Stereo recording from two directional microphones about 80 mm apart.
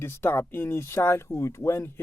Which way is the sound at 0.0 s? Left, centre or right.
Left.